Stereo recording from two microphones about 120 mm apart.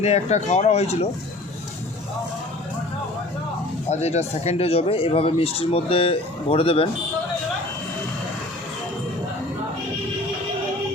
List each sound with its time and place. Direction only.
0.0 s speech: 70° left (ahead or behind)
3.8 s speech: 65° left (ahead or behind)